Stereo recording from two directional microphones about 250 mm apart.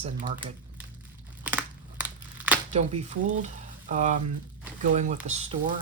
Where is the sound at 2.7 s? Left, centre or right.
Right.